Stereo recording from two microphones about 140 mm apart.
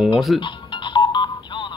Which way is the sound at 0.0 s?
Centre (ahead or behind).